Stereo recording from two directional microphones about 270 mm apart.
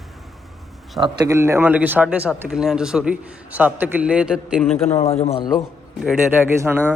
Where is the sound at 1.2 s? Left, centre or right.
Centre.